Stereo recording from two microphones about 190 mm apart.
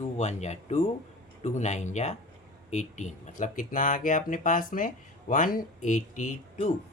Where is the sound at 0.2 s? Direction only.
35° left (ahead or behind).